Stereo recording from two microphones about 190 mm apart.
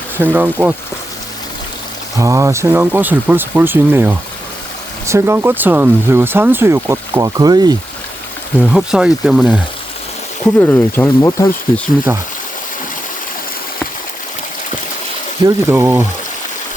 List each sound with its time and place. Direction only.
0.2 s speech: 10° right (ahead or behind)
2.1 s speech: 15° right (ahead or behind)
8.7 s speech: 5° right (ahead or behind)
10.4 s speech: 10° left (ahead or behind)
15.4 s speech: 15° right (ahead or behind)